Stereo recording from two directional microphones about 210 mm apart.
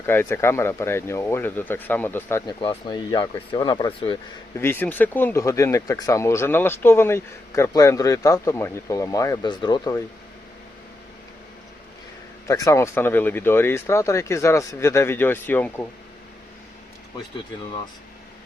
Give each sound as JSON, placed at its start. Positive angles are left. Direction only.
{"t": 0.0, "sound": "speech", "side_deg": 10}
{"t": 2.5, "sound": "speech", "side_deg": 25}
{"t": 4.5, "sound": "speech", "side_deg": 10}
{"t": 12.5, "sound": "speech", "side_deg": 15}